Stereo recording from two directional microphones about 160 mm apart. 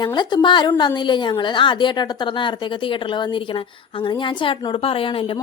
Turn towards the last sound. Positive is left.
turn(degrees=35)  # may be behind; listen again after turning